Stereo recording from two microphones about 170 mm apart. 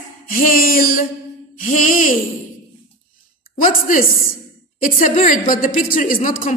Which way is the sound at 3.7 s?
55° left (ahead or behind).